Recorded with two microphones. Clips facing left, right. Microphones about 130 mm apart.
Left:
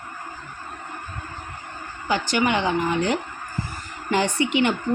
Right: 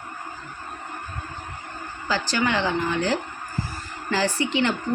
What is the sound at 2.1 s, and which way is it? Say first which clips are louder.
Speech: left 2 dB; 20° left (ahead or behind).